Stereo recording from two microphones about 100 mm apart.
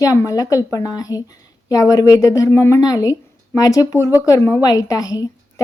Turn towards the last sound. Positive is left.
turn(degrees=35)  # may be behind; listen again after turning